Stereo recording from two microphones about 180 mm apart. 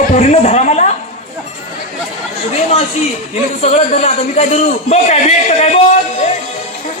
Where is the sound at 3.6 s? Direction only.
35° left (ahead or behind).